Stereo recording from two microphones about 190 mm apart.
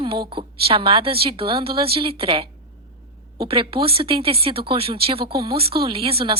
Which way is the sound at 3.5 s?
30° right (ahead or behind).